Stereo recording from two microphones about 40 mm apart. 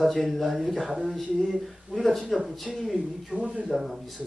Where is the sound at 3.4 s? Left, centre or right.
Right.